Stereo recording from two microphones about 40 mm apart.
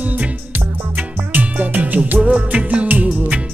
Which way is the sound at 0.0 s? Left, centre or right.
Right.